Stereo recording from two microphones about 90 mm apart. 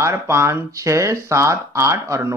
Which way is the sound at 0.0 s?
30° right (ahead or behind).